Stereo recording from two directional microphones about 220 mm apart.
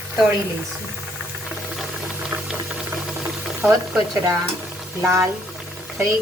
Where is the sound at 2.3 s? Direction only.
20° right (ahead or behind).